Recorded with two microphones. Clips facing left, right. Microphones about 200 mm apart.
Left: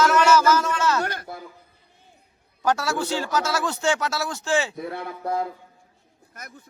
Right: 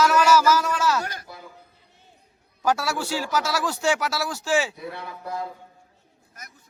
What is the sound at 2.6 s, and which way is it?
A man's voice, 5° right (ahead or behind).